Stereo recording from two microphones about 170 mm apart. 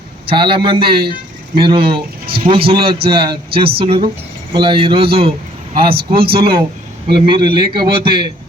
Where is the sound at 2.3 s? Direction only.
30° right (ahead or behind).